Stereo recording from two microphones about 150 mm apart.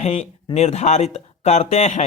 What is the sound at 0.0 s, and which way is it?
Speech, 45° left (ahead or behind).